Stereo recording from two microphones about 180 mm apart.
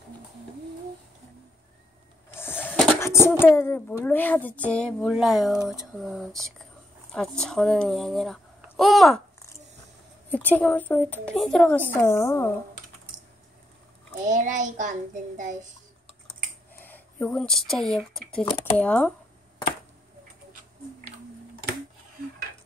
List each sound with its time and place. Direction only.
2.3 s a child's voice: 10° left (ahead or behind)
10.3 s a woman's voice: 10° left (ahead or behind)
11.9 s a woman's voice: 15° left (ahead or behind)
14.2 s child singing: 45° right (ahead or behind)
16.8 s speech: 10° left (ahead or behind)